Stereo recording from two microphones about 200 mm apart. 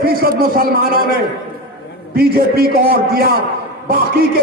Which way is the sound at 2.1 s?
50° right (ahead or behind).